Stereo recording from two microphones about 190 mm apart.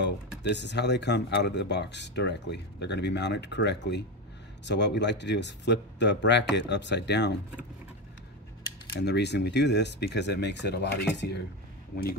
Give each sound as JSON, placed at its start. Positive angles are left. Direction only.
{"t": 0.0, "sound": "speech", "side_deg": 65}
{"t": 9.0, "sound": "speech", "side_deg": 60}